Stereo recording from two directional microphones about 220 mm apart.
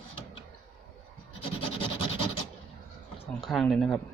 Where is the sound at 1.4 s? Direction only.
25° left (ahead or behind).